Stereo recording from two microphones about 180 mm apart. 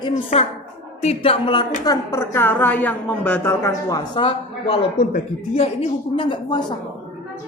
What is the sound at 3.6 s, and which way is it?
Speech, 20° left (ahead or behind).